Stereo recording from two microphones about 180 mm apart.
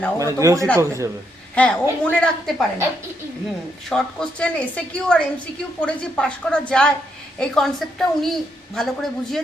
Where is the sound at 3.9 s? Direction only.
5° left (ahead or behind).